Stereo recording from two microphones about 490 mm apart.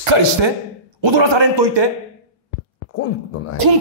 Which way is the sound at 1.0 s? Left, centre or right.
Right.